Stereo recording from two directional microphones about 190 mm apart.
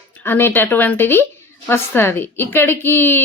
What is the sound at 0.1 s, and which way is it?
A woman's voice, 10° left (ahead or behind).